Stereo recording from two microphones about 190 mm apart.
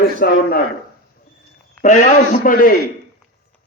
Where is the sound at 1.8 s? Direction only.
45° left (ahead or behind).